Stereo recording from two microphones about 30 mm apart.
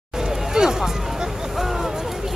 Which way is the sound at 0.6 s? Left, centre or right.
Centre.